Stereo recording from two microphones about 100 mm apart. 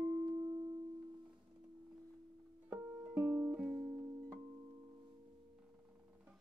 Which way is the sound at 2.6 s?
20° right (ahead or behind).